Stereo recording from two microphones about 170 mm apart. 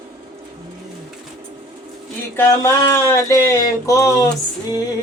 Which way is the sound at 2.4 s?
15° left (ahead or behind).